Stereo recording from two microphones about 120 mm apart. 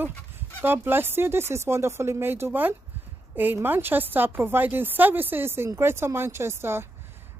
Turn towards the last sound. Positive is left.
turn(degrees=-20)  # may be behind; listen again after turning